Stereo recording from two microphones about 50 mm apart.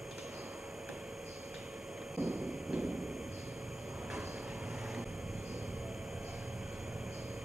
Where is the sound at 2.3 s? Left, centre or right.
Centre.